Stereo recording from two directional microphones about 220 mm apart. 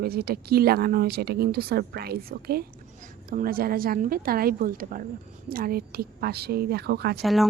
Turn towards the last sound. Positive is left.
turn(degrees=0)  # may be behind; listen again after turning